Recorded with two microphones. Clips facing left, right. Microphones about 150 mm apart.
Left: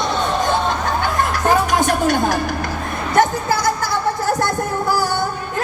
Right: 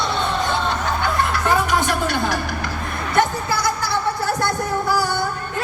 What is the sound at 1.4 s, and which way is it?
Music, 45° left (ahead or behind).